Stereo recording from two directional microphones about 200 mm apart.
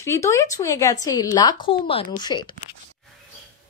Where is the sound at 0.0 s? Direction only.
15° left (ahead or behind).